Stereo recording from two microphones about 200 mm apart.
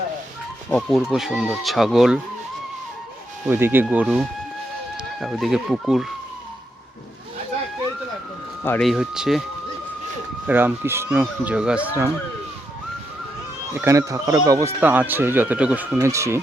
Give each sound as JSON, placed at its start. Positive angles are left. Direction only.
{"t": 0.7, "sound": "speech", "side_deg": 0}
{"t": 3.4, "sound": "speech", "side_deg": -10}
{"t": 8.6, "sound": "speech", "side_deg": 10}
{"t": 8.9, "sound": "speech", "side_deg": -5}
{"t": 10.4, "sound": "speech", "side_deg": -10}
{"t": 13.7, "sound": "speech", "side_deg": -15}